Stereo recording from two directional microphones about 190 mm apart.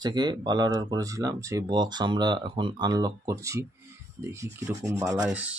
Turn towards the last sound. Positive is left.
turn(degrees=-5)  # may be behind; listen again after turning